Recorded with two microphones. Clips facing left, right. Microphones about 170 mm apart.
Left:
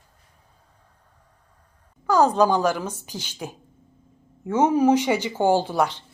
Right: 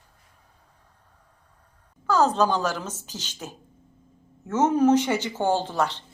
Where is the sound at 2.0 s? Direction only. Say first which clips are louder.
Left 3 dB; 15° left (ahead or behind).